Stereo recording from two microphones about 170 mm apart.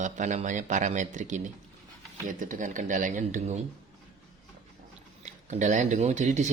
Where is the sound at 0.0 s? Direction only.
45° right (ahead or behind).